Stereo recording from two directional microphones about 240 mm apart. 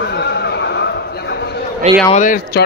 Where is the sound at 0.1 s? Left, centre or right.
Left.